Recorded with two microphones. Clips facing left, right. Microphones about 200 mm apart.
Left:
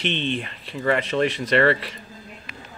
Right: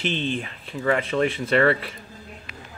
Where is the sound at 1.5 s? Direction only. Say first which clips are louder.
Even; 5° right (ahead or behind).